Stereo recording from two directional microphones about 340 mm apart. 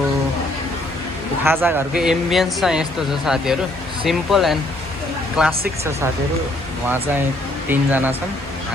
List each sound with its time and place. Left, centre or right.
1.5 s speech: centre
6.8 s speech: centre